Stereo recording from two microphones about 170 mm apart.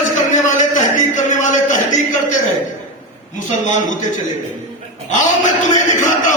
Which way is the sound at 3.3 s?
45° left (ahead or behind).